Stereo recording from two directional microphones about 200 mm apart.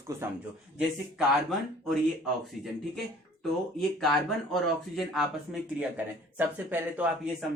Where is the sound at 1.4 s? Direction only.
Centre (ahead or behind).